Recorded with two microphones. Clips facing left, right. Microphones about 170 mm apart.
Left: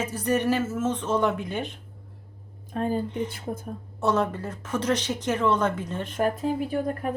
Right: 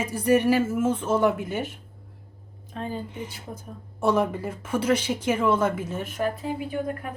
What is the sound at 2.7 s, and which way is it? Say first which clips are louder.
Speech: left 6 dB; 50° left (ahead or behind).